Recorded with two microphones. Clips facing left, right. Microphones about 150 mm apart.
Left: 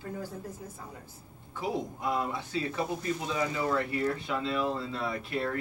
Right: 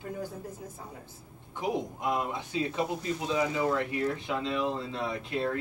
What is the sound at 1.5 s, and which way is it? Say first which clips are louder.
A man's voice: right 1 dB; 20° right (ahead or behind).